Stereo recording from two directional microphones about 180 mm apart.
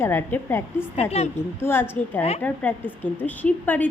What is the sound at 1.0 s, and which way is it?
Speech, 35° left (ahead or behind).